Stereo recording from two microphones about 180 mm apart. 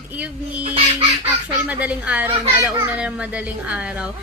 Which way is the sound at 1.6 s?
5° right (ahead or behind).